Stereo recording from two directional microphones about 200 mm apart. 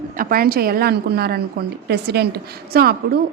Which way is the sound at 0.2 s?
45° right (ahead or behind).